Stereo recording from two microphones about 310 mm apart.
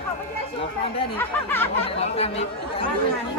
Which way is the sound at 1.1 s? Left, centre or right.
Centre.